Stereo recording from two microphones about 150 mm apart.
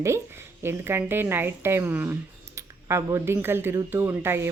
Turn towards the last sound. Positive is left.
turn(degrees=-15)  # may be behind; listen again after turning